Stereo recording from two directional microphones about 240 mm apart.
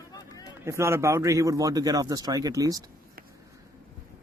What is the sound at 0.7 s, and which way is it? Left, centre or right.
Speech, centre.